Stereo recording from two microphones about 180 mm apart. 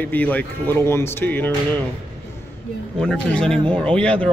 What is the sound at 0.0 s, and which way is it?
Speech, 10° left (ahead or behind).